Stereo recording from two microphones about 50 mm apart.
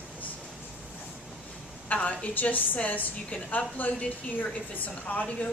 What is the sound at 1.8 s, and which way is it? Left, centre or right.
A woman's voice, left.